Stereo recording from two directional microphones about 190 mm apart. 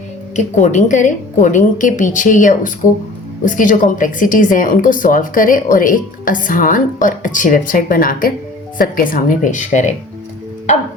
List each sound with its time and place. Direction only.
0.3 s a woman's voice: 40° left (ahead or behind)